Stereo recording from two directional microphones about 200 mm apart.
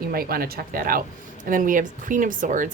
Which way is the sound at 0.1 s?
50° right (ahead or behind).